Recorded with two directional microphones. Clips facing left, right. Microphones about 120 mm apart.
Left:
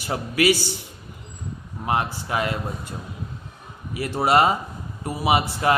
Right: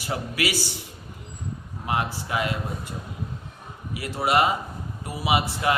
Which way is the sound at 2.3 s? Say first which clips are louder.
Left 2 dB; 30° left (ahead or behind).